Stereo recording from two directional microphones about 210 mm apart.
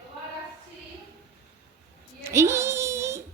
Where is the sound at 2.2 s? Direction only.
10° right (ahead or behind).